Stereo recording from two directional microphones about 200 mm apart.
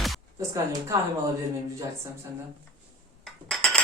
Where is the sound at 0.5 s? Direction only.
15° right (ahead or behind).